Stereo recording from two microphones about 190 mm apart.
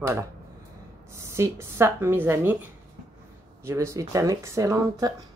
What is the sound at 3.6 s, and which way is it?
Speech, 15° right (ahead or behind).